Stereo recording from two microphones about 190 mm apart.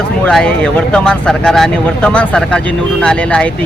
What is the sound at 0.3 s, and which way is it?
Speech, 5° left (ahead or behind).